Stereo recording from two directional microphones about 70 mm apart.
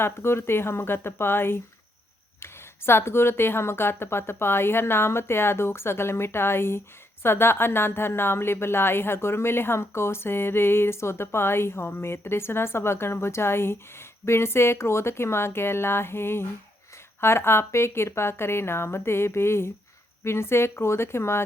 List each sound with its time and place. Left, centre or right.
0.0 s a woman's voice: left